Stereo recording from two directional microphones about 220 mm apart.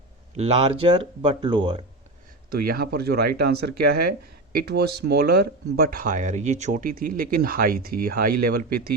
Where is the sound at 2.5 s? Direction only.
45° right (ahead or behind).